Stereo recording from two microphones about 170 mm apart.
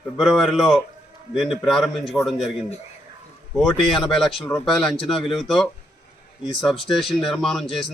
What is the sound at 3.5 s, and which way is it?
Speech, centre (ahead or behind).